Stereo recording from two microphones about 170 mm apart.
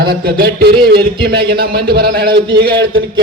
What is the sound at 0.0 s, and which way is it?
A man's voice, 65° right (ahead or behind).